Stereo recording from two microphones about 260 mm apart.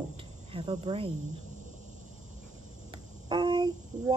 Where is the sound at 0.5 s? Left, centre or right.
Centre.